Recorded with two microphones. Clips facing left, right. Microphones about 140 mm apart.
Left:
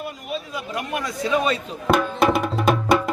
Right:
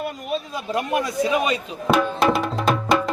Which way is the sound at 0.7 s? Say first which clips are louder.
Right 5 dB; 25° right (ahead or behind).